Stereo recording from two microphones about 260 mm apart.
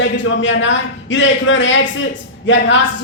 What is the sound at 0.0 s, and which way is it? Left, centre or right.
Speech, left.